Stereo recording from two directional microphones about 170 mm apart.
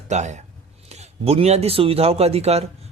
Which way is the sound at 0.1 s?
40° right (ahead or behind).